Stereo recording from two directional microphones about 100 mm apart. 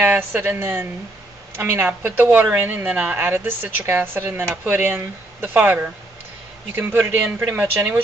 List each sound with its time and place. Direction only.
0.0 s a woman's voice: 20° right (ahead or behind)